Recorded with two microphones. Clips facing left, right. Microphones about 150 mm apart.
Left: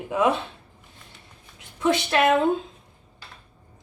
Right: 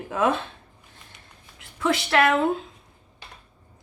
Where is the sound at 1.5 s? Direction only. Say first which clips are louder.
Left 2 dB; 20° left (ahead or behind).